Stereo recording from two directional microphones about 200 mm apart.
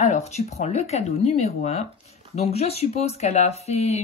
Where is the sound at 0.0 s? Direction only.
35° left (ahead or behind).